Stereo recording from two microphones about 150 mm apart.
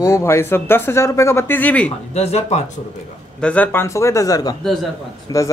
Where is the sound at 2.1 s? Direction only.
45° left (ahead or behind).